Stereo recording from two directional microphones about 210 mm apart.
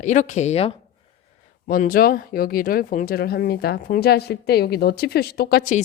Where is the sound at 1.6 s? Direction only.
40° left (ahead or behind).